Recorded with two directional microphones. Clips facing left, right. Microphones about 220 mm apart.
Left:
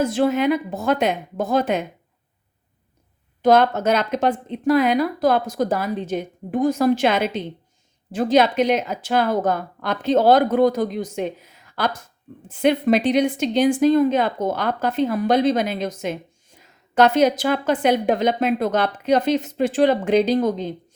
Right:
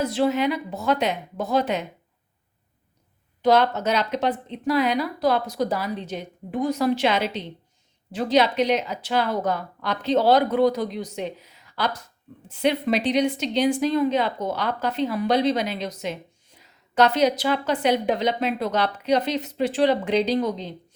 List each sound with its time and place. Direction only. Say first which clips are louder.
0.0 s a woman's voice: left 3 dB; 50° left (ahead or behind)
3.4 s a woman's voice: left 3 dB; 50° left (ahead or behind)